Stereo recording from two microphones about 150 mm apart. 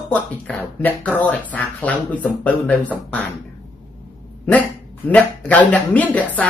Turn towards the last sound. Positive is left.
turn(degrees=10)  # may be behind; listen again after turning